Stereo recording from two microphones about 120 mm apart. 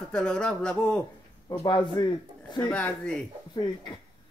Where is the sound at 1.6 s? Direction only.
40° left (ahead or behind).